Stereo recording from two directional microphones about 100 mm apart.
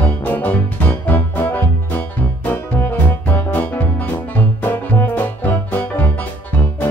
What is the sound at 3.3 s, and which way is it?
Music, 20° left (ahead or behind).